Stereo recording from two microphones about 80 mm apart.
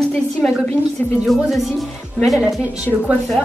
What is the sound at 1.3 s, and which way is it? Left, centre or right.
Speech, centre.